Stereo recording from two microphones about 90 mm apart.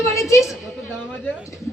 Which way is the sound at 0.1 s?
35° left (ahead or behind).